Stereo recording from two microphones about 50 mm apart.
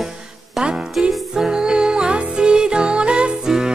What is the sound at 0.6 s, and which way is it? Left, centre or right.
Music, centre.